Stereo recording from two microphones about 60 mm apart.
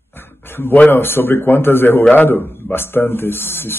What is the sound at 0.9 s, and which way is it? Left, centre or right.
Speech, left.